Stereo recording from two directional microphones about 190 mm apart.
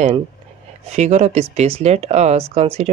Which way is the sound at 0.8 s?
35° right (ahead or behind).